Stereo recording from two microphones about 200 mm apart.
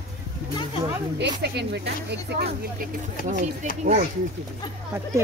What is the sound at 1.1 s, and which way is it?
Speech, 55° right (ahead or behind).